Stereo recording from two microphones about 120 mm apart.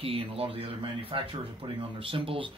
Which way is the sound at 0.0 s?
50° right (ahead or behind).